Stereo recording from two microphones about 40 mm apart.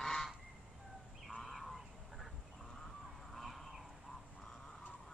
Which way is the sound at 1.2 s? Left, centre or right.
Centre.